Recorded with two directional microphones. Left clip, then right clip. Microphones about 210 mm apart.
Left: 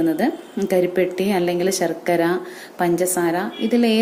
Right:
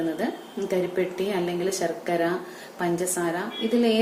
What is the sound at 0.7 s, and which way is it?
A woman's voice, 45° left (ahead or behind).